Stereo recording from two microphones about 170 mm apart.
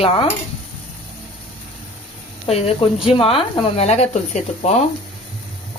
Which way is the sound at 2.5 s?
35° left (ahead or behind).